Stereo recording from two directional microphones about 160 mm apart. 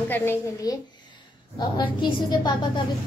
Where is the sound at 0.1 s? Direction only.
15° left (ahead or behind).